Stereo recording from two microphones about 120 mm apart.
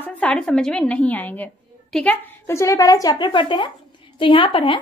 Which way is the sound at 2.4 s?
25° left (ahead or behind).